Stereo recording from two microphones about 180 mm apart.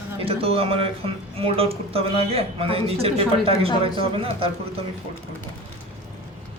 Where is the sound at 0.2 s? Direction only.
30° right (ahead or behind).